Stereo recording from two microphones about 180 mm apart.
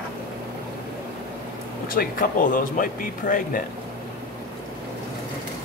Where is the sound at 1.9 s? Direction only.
50° left (ahead or behind).